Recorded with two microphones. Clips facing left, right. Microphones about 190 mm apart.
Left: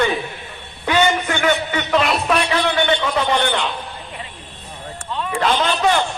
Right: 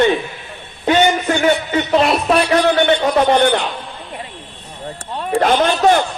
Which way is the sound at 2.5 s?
45° right (ahead or behind).